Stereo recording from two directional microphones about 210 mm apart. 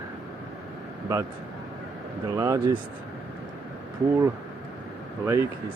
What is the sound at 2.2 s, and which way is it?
Speech, 15° right (ahead or behind).